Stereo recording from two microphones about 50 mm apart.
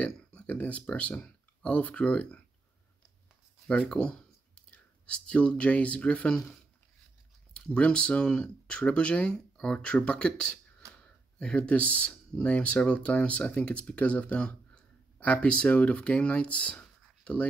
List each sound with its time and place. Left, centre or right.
0.0 s speech: left
3.6 s speech: left
7.5 s speech: left
17.2 s writing: left